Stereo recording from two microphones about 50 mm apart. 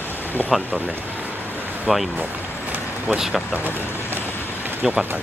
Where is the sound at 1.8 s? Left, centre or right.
Centre.